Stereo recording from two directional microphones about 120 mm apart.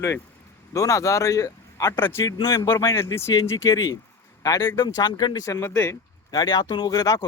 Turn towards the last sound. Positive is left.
turn(degrees=35)  # may be behind; listen again after turning